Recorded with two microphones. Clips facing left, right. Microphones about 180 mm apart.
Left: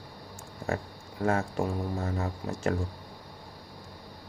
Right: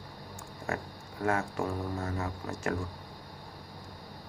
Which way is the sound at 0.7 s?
25° left (ahead or behind).